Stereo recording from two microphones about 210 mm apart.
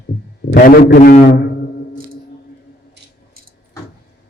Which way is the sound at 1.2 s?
50° left (ahead or behind).